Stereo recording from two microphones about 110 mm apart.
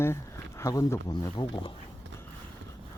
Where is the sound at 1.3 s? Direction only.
45° left (ahead or behind).